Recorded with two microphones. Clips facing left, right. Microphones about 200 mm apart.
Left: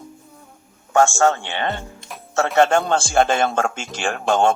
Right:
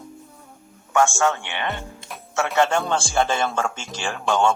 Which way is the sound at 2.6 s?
60° left (ahead or behind).